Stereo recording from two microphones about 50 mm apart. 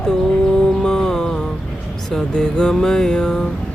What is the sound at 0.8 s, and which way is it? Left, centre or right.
Music, centre.